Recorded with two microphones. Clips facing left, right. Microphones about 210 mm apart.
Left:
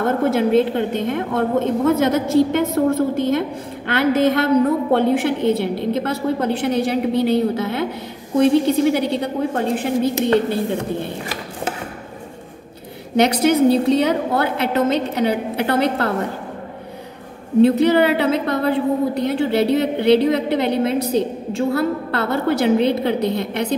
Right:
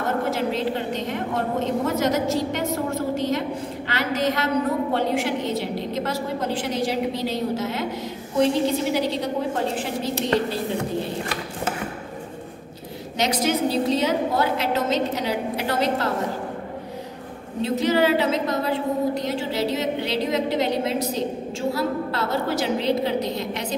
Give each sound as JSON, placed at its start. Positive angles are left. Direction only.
{"t": 0.3, "sound": "a woman's voice", "side_deg": 55}
{"t": 13.1, "sound": "a woman's voice", "side_deg": 60}
{"t": 17.6, "sound": "a woman's voice", "side_deg": 60}